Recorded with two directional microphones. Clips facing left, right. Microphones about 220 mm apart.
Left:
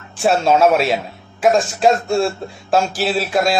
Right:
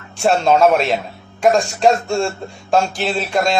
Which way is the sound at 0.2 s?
5° left (ahead or behind).